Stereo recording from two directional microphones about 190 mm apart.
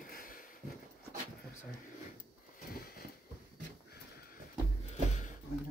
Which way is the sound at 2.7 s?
50° left (ahead or behind).